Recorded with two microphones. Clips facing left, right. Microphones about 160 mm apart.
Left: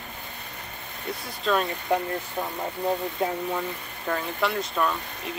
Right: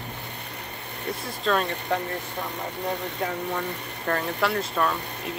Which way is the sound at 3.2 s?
20° left (ahead or behind).